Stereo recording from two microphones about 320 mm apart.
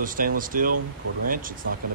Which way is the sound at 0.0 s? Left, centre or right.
Right.